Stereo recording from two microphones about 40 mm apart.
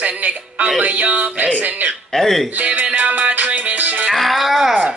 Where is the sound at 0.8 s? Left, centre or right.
Right.